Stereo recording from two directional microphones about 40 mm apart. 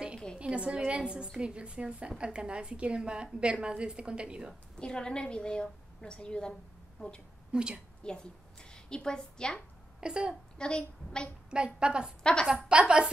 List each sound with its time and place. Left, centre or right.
0.4 s a woman's voice: right
4.7 s a woman's voice: left
7.5 s a woman's voice: right
8.0 s a woman's voice: left
9.9 s speech: right
10.6 s a woman's voice: left
11.5 s a woman's voice: right
12.2 s a woman's voice: left
12.6 s a woman's voice: right